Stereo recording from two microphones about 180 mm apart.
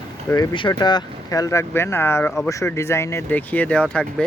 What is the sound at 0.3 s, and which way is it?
Speech, 25° left (ahead or behind).